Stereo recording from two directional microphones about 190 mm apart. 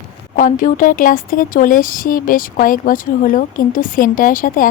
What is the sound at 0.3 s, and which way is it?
Speech, 45° left (ahead or behind).